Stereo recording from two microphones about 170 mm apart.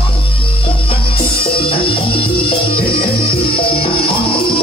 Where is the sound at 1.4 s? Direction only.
30° left (ahead or behind).